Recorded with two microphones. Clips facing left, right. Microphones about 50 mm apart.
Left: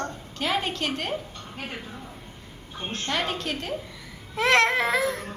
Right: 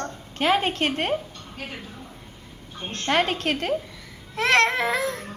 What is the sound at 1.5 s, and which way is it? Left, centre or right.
Speech, centre.